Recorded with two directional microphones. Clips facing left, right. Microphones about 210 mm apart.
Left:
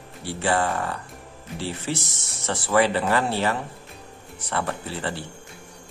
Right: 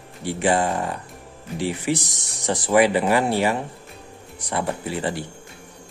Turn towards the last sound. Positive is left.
turn(degrees=-15)  # may be behind; listen again after turning